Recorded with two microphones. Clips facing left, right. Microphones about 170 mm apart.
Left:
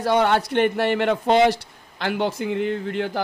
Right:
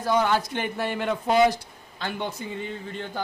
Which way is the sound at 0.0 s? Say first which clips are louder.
Left 4 dB; 70° left (ahead or behind).